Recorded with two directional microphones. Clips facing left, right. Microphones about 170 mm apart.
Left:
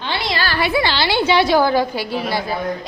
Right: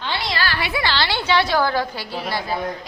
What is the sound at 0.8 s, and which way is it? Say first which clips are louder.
A woman's voice: left 5 dB; 15° left (ahead or behind).